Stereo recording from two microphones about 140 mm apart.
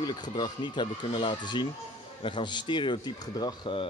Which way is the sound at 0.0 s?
30° left (ahead or behind).